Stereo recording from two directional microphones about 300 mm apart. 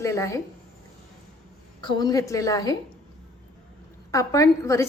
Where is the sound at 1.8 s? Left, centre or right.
Centre.